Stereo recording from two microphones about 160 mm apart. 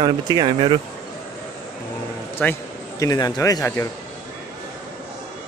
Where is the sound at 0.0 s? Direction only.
25° right (ahead or behind).